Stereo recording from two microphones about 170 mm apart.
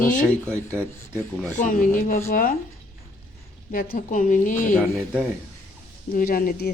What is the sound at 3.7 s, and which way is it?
Speech, 60° left (ahead or behind).